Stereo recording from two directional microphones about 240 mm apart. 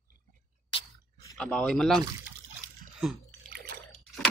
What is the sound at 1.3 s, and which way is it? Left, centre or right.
Speech, centre.